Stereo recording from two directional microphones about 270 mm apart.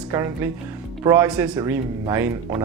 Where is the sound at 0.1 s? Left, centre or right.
Centre.